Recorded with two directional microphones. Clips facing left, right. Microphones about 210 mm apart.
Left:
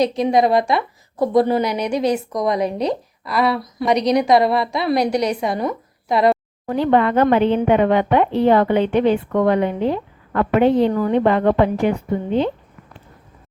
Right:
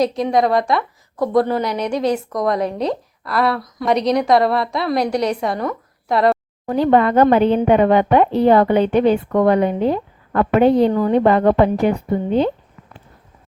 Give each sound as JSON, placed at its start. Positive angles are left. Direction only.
{"t": 0.0, "sound": "a woman's voice", "side_deg": 0}
{"t": 0.5, "sound": "speech", "side_deg": 25}
{"t": 1.2, "sound": "a woman's voice", "side_deg": 0}
{"t": 6.7, "sound": "a woman's voice", "side_deg": -40}